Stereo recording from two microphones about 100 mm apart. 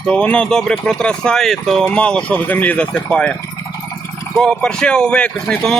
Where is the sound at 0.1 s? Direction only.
10° left (ahead or behind).